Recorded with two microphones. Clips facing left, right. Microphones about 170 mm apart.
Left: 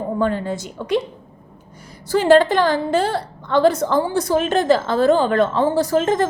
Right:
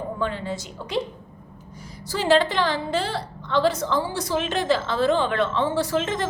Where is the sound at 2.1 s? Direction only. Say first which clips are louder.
Left 7 dB; 50° left (ahead or behind).